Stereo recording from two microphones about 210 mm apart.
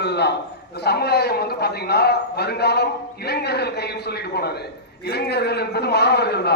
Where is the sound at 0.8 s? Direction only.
50° left (ahead or behind).